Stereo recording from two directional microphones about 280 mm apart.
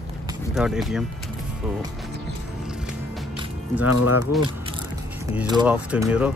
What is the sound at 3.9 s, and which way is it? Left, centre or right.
Speech, left.